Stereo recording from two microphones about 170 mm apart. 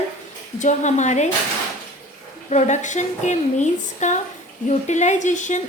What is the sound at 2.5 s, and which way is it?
Speech, 45° left (ahead or behind).